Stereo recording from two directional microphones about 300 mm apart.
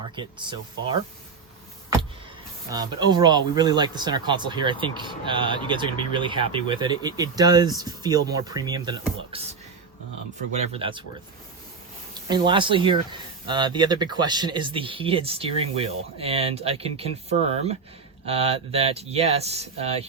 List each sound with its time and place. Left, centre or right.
0.2 s speech: centre
2.6 s speech: centre
10.7 s speech: centre
12.1 s speech: centre
18.3 s speech: centre